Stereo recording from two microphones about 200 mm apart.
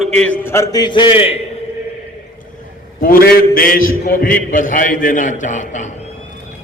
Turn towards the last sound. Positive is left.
turn(degrees=40)  # may be behind; listen again after turning